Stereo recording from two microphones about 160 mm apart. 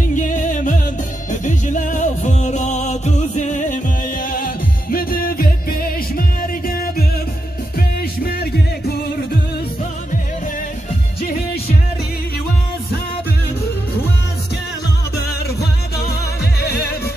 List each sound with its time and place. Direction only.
0.1 s music: 50° left (ahead or behind); by 8.9 s 70° left (ahead or behind)
16.5 s music: 80° left